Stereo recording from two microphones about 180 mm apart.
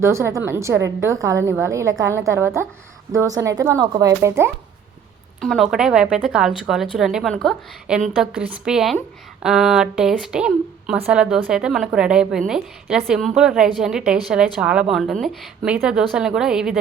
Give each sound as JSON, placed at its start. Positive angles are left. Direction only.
{"t": 0.0, "sound": "a woman's voice", "side_deg": -15}
{"t": 5.4, "sound": "a woman's voice", "side_deg": 0}